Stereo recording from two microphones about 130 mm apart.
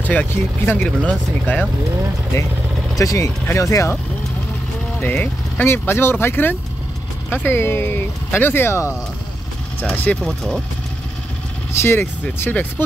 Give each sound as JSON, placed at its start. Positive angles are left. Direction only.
{"t": 0.0, "sound": "speech", "side_deg": 10}
{"t": 3.0, "sound": "speech", "side_deg": 25}
{"t": 5.0, "sound": "speech", "side_deg": 15}
{"t": 10.2, "sound": "speech", "side_deg": 0}
{"t": 11.8, "sound": "speech", "side_deg": 15}